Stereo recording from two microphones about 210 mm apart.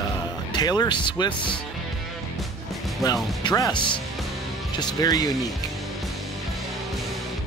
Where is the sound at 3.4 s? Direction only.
20° left (ahead or behind).